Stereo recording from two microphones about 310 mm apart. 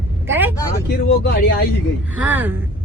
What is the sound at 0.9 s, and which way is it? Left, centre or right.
Speech, left.